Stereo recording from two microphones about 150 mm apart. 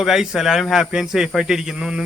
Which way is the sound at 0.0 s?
5° right (ahead or behind).